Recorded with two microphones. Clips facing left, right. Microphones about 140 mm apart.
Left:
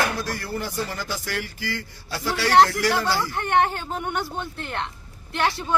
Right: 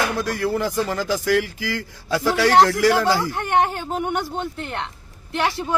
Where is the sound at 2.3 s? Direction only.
50° right (ahead or behind).